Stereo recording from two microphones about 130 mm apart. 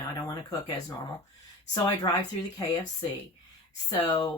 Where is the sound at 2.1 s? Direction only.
35° left (ahead or behind).